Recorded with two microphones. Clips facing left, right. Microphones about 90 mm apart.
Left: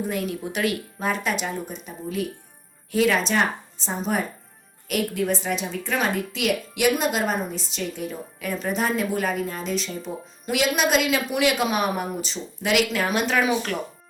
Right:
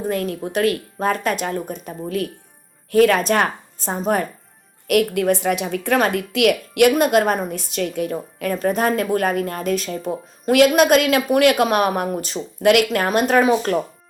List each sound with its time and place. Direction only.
0.0 s speech: 45° right (ahead or behind)
4.9 s a woman's voice: 65° right (ahead or behind); by 13.7 s 40° right (ahead or behind)